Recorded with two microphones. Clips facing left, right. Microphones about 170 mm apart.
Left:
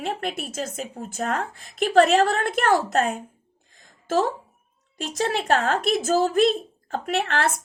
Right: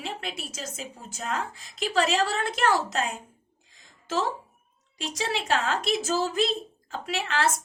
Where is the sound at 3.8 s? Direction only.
50° left (ahead or behind).